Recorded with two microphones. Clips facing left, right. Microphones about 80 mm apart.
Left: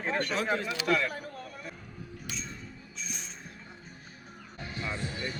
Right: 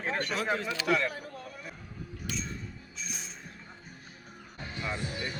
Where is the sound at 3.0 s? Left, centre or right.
Centre.